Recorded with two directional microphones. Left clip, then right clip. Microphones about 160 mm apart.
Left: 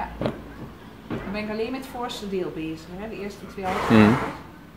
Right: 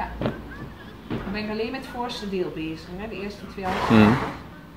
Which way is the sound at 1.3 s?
10° left (ahead or behind).